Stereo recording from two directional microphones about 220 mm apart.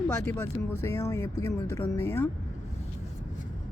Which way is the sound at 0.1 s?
10° left (ahead or behind).